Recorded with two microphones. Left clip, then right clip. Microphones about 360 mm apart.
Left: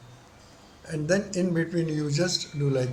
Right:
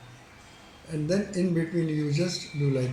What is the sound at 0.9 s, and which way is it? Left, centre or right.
Speech, left.